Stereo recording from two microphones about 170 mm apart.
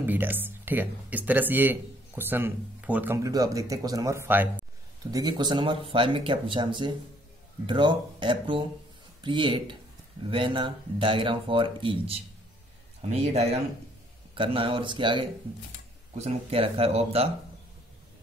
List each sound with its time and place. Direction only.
0.0 s speech: 10° right (ahead or behind)
5.1 s speech: 25° right (ahead or behind)